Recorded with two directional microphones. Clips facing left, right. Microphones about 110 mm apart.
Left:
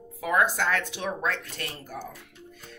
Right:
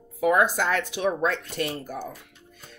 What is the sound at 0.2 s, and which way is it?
Speech, 20° right (ahead or behind).